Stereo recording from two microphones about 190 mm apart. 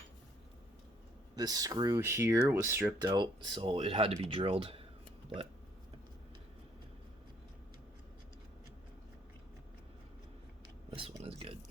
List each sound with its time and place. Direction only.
1.4 s speech: 20° right (ahead or behind)
10.9 s speech: 30° right (ahead or behind)